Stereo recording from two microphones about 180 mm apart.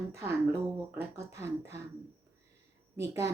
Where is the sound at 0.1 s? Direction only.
15° right (ahead or behind).